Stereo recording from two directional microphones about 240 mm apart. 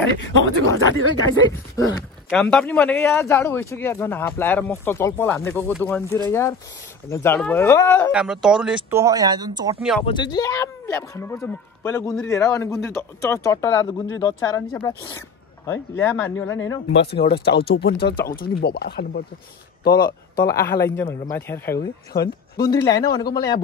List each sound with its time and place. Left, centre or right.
0.0 s speech: left
1.4 s speech: centre
2.2 s speech: centre
8.1 s speech: centre
9.8 s speech: centre
10.0 s speech: centre
16.9 s speech: left
20.8 s speech: centre
22.1 s speech: left
22.7 s speech: centre